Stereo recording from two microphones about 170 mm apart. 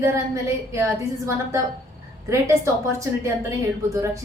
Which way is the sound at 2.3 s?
15° right (ahead or behind).